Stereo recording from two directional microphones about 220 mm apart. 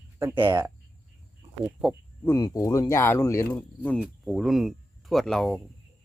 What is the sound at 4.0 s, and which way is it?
Speech, centre (ahead or behind).